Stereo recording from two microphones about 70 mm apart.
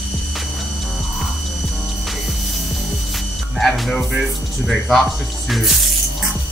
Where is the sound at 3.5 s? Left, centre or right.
Centre.